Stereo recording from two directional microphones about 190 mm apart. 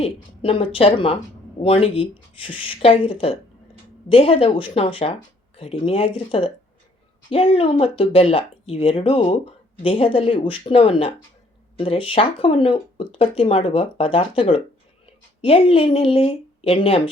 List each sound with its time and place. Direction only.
0.0 s speech: 30° left (ahead or behind)